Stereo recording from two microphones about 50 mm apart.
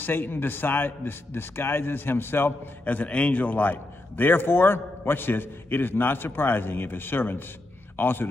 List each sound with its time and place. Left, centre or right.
0.0 s a man's voice: left
2.8 s a man's voice: left
4.2 s a man's voice: left